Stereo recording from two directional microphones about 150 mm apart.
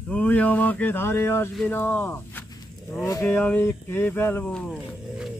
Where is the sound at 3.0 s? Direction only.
20° left (ahead or behind).